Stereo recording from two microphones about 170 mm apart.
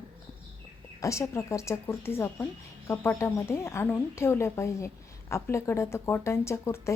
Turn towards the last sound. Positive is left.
turn(degrees=15)  # may be behind; listen again after turning